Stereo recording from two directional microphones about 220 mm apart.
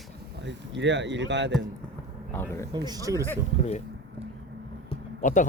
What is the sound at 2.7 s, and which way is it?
Speech, 15° right (ahead or behind).